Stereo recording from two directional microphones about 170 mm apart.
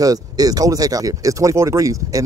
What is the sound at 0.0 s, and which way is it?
Speech, 20° right (ahead or behind).